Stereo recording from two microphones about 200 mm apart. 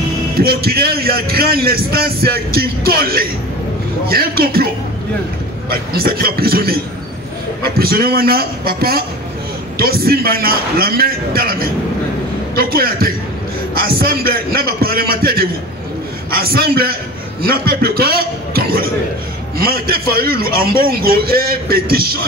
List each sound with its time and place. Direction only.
0.4 s a man's voice: 50° right (ahead or behind)
5.7 s a man's voice: 50° right (ahead or behind)